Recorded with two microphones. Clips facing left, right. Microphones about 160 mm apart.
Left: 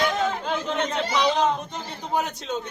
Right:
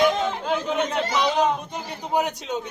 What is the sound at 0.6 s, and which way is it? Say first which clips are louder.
Speech: right 2 dB; 10° right (ahead or behind).